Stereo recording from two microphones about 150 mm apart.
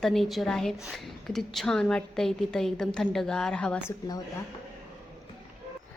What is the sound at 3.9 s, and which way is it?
Speech, 25° left (ahead or behind).